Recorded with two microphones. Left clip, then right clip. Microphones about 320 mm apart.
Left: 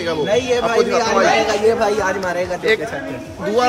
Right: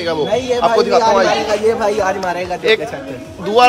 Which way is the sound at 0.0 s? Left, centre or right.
Centre.